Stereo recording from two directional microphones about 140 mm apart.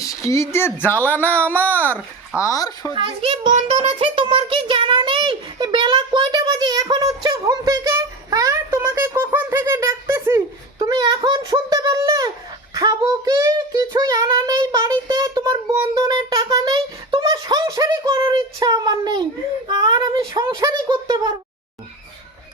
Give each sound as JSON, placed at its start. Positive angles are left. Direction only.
{"t": 0.0, "sound": "speech", "side_deg": 25}
{"t": 2.4, "sound": "a child's voice", "side_deg": 25}
{"t": 2.9, "sound": "a child's voice", "side_deg": -40}